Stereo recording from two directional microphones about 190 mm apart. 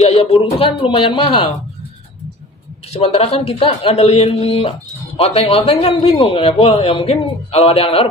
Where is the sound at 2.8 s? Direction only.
30° left (ahead or behind).